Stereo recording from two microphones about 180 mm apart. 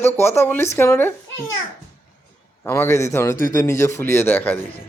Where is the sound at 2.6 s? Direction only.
15° left (ahead or behind).